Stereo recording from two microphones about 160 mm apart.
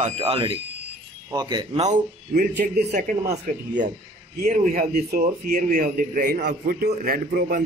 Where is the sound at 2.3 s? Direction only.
70° right (ahead or behind).